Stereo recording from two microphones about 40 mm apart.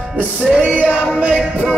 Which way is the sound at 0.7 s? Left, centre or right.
Right.